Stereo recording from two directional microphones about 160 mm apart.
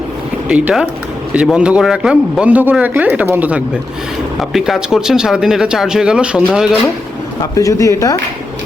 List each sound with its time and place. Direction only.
0.4 s speech: 10° right (ahead or behind)
7.5 s speech: 20° left (ahead or behind)